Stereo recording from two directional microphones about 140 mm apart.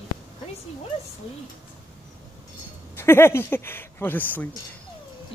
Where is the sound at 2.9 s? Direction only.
15° left (ahead or behind).